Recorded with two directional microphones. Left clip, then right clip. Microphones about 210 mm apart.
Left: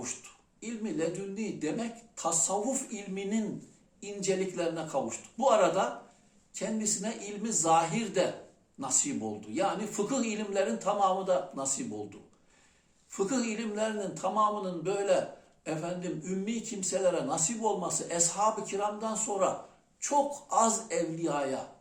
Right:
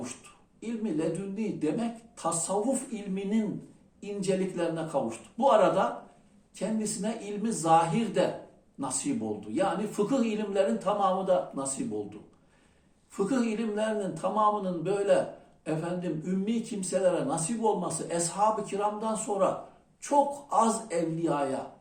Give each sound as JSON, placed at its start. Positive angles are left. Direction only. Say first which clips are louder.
{"t": 0.6, "sound": "speech", "louder": "right 2 dB", "side_deg": 15}
{"t": 13.1, "sound": "speech", "louder": "right 2 dB", "side_deg": 15}